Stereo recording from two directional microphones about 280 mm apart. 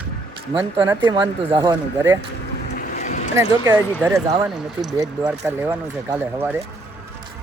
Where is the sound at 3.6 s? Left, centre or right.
Centre.